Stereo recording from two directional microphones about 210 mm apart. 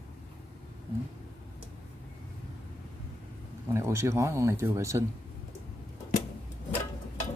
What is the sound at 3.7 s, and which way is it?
Speech, 15° right (ahead or behind).